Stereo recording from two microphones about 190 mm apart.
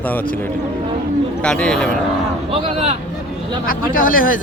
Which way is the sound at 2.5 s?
30° right (ahead or behind).